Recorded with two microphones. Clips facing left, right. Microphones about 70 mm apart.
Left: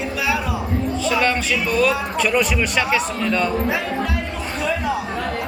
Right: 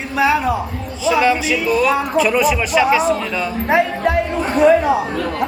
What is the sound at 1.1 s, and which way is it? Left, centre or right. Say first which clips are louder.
Speech: right 6 dB; centre.